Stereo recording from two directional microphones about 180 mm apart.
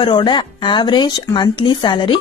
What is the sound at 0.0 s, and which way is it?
A woman's voice, 25° left (ahead or behind).